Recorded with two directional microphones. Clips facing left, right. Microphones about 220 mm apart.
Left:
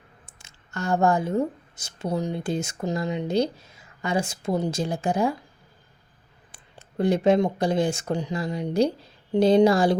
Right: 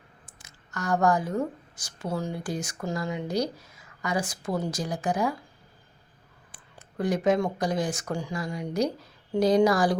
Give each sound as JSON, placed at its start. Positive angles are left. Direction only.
{"t": 0.3, "sound": "speech", "side_deg": 25}
{"t": 6.5, "sound": "speech", "side_deg": 25}